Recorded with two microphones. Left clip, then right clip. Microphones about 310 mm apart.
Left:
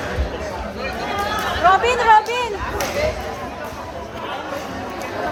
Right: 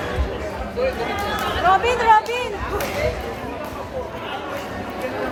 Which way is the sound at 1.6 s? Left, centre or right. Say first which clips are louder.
Left 2 dB; left.